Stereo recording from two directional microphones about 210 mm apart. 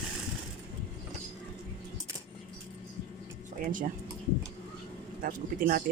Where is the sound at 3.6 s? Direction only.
40° right (ahead or behind).